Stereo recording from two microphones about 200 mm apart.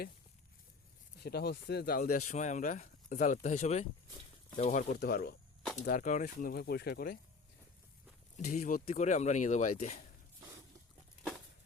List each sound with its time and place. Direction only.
1.2 s speech: 55° left (ahead or behind)
4.9 s speech: 50° left (ahead or behind)
8.4 s speech: 45° left (ahead or behind)